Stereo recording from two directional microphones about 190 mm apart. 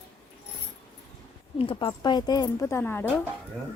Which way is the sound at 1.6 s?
25° left (ahead or behind).